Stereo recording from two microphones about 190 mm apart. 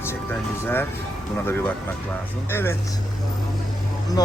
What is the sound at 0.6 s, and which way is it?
Speech, 10° left (ahead or behind).